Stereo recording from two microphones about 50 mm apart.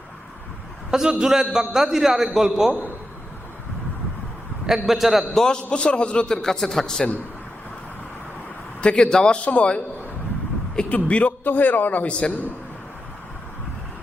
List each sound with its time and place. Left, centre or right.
0.9 s a man's voice: centre
4.6 s a man's voice: centre
5.3 s a man's voice: centre
5.7 s a man's voice: left
8.8 s a man's voice: centre
10.8 s a man's voice: left